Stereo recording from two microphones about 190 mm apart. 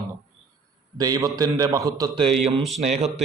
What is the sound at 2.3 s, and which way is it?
Speech, centre (ahead or behind).